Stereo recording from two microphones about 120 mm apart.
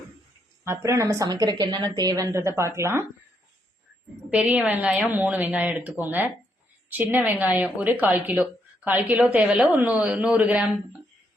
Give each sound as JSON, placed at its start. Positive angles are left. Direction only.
{"t": 0.6, "sound": "a woman's voice", "side_deg": -20}
{"t": 4.3, "sound": "a woman's voice", "side_deg": -10}